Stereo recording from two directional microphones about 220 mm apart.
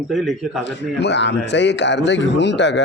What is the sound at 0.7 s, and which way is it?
Speech, 50° left (ahead or behind).